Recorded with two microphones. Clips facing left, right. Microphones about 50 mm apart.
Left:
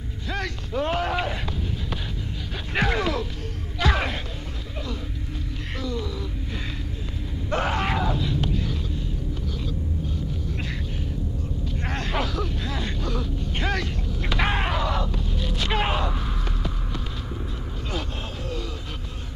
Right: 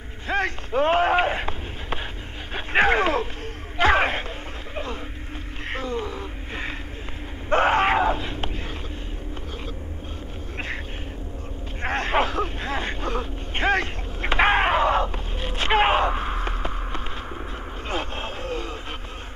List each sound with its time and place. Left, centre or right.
0.3 s speech: right
5.8 s a sound: right
11.8 s speech: right
17.8 s vehicle: right